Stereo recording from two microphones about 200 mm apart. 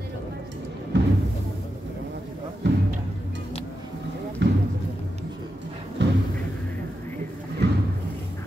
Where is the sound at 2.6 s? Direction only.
60° right (ahead or behind).